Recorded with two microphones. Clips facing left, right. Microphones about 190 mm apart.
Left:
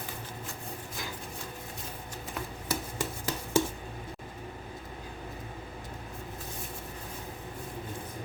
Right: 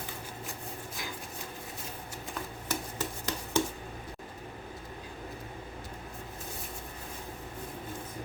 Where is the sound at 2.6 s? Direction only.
10° left (ahead or behind).